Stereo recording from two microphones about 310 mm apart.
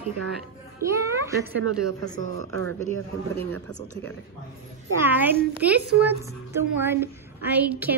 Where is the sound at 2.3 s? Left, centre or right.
Right.